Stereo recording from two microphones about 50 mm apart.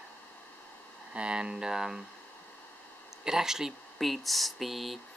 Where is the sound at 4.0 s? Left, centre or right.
Centre.